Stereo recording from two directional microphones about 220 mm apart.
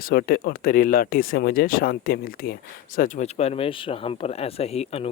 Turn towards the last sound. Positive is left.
turn(degrees=30)  # may be behind; listen again after turning